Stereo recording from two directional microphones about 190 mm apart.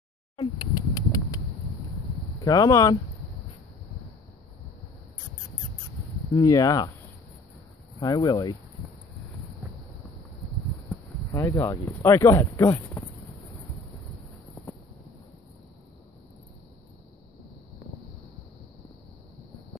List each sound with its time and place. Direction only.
0.4 s a sound: 20° left (ahead or behind)
2.4 s speech: 20° left (ahead or behind)
6.3 s speech: 15° left (ahead or behind)
8.0 s speech: 20° left (ahead or behind)
11.3 s speech: 15° left (ahead or behind)